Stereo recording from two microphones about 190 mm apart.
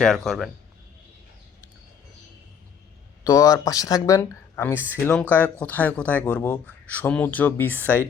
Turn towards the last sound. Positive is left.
turn(degrees=10)  # may be behind; listen again after turning